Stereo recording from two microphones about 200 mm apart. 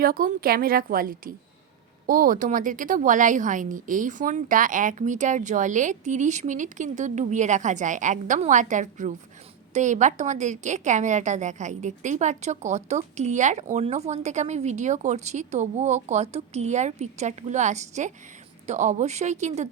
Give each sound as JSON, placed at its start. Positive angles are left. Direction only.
{"t": 0.0, "sound": "a woman's voice", "side_deg": -45}